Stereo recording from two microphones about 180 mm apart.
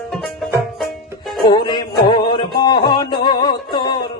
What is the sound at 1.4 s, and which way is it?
Music, 25° left (ahead or behind).